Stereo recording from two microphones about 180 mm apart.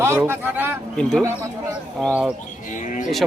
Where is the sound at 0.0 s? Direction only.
15° right (ahead or behind).